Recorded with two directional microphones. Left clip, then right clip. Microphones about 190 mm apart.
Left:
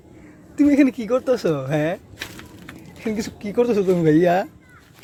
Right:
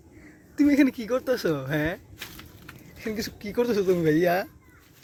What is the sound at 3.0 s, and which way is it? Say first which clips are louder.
Speech: left 5 dB; 5° left (ahead or behind).